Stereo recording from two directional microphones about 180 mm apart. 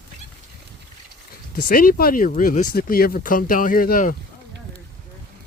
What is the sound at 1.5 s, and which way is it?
Speech, 50° left (ahead or behind).